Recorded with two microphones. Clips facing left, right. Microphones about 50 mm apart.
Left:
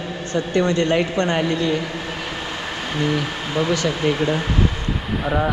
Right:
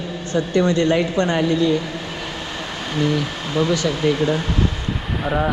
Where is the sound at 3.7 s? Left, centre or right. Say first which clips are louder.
Right 1 dB; left.